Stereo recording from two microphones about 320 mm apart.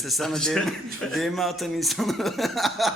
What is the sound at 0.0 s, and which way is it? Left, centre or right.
Speech, centre.